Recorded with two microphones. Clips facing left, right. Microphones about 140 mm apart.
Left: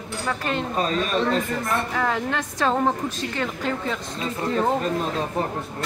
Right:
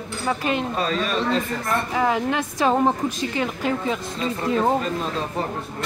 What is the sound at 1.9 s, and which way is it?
A woman's voice, 15° right (ahead or behind).